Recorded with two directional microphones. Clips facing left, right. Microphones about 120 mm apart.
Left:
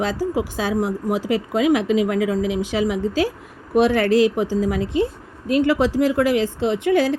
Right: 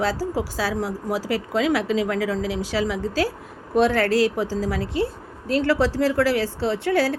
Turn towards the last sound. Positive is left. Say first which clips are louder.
# left 3 dB
turn(degrees=15)  # may be behind; listen again after turning